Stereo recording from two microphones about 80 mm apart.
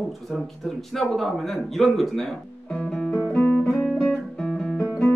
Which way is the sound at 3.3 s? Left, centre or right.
Centre.